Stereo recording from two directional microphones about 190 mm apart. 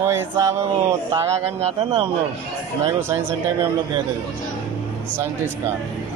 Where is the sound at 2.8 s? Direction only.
10° right (ahead or behind).